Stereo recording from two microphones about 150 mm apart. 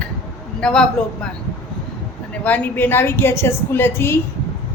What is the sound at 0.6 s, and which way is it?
Speech, 5° left (ahead or behind).